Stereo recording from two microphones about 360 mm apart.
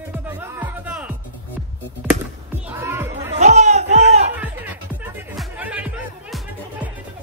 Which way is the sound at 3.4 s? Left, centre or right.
Centre.